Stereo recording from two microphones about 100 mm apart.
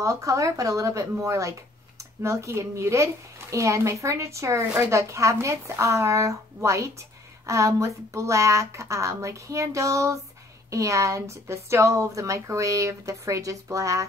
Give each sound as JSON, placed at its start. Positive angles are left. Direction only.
{"t": 0.0, "sound": "speech", "side_deg": -30}